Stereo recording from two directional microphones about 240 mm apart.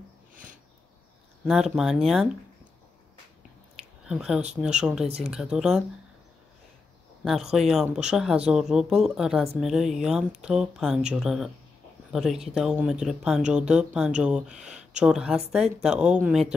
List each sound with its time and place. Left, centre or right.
1.4 s speech: centre
4.1 s speech: centre
5.0 s speech: right
5.3 s speech: centre
7.2 s speech: centre